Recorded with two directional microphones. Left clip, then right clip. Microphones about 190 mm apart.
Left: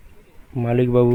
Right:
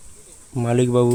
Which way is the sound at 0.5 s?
5° right (ahead or behind).